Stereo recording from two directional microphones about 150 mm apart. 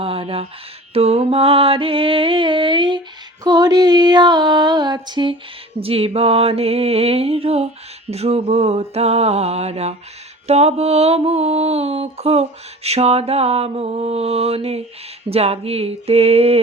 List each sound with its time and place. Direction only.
0.0 s speech: 40° right (ahead or behind)
0.9 s mantra: 40° right (ahead or behind)
3.4 s a sound: 25° right (ahead or behind)
5.8 s mantra: 40° right (ahead or behind)